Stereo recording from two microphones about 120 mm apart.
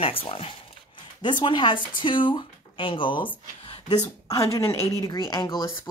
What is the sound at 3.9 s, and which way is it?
Speech, 30° left (ahead or behind).